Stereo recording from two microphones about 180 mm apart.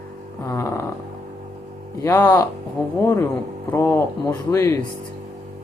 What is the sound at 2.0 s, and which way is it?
Speech, 10° left (ahead or behind).